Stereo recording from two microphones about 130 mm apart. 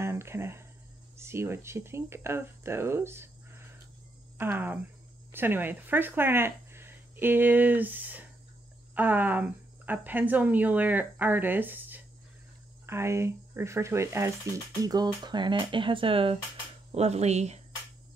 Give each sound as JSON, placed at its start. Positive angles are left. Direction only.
{"t": 0.0, "sound": "a sound", "side_deg": -20}
{"t": 1.1, "sound": "speech", "side_deg": -20}
{"t": 16.9, "sound": "speech", "side_deg": -55}